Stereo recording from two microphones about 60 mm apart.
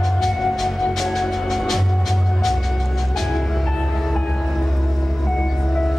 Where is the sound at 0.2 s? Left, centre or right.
Centre.